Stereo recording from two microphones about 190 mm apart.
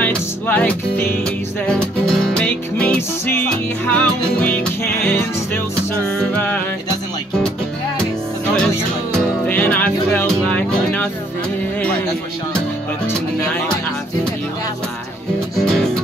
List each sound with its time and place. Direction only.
0.0 s music: 10° left (ahead or behind)
6.0 s music: 5° left (ahead or behind)
9.1 s music: 10° left (ahead or behind)
15.5 s music: centre (ahead or behind)